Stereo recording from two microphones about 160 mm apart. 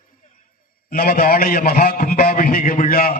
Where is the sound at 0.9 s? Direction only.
65° left (ahead or behind).